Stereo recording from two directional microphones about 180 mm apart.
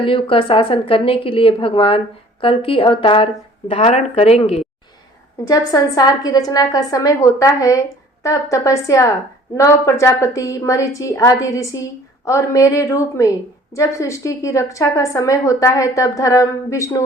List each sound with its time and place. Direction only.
0.0 s a woman's voice: 30° left (ahead or behind)
5.5 s a woman's voice: 20° left (ahead or behind)